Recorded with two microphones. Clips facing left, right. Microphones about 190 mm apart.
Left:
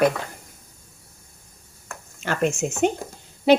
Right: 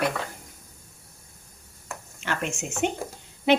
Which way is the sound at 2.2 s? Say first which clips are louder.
Left 8 dB; 40° left (ahead or behind).